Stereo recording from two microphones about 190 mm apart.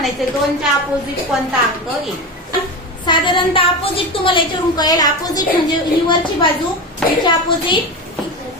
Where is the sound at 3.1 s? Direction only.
25° left (ahead or behind).